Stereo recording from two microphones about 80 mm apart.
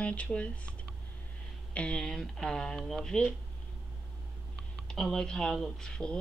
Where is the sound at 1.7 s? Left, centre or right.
Centre.